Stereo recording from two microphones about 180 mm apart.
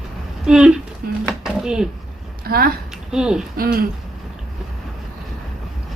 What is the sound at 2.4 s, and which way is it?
Speech, 55° right (ahead or behind).